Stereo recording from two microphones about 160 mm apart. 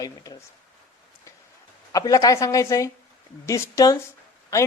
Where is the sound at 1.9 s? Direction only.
20° left (ahead or behind).